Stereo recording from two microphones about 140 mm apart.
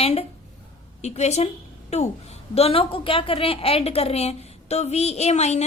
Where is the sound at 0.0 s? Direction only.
45° left (ahead or behind).